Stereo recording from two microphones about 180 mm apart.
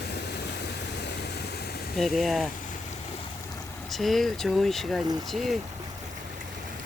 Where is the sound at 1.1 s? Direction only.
65° left (ahead or behind).